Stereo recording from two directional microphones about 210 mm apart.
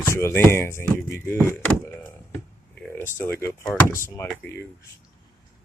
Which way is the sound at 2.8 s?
10° left (ahead or behind).